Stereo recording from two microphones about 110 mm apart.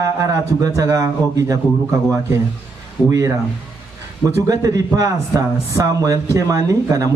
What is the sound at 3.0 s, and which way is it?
Speech, 30° right (ahead or behind).